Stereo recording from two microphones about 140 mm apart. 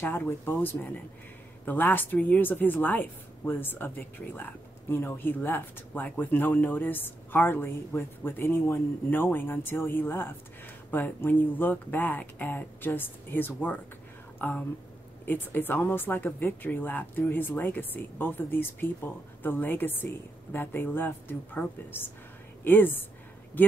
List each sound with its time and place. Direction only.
0.0 s a woman's voice: 15° left (ahead or behind)